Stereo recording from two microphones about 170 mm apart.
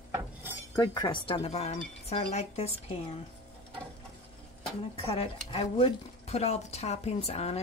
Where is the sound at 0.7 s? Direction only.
25° left (ahead or behind).